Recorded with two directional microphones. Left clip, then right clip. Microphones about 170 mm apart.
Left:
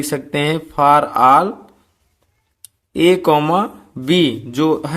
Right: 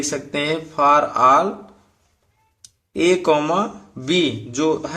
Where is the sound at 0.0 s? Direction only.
45° left (ahead or behind).